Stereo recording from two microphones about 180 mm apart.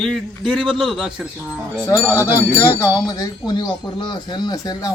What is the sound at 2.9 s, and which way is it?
Speech, 20° left (ahead or behind).